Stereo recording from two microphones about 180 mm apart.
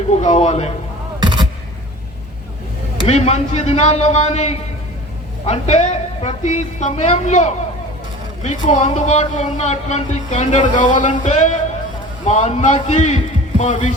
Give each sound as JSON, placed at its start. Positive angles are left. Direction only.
{"t": 0.1, "sound": "speech", "side_deg": 40}
{"t": 1.2, "sound": "a sound", "side_deg": -25}
{"t": 3.1, "sound": "speech", "side_deg": 35}